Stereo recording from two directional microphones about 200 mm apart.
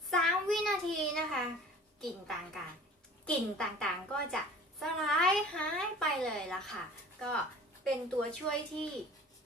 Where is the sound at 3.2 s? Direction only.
5° left (ahead or behind).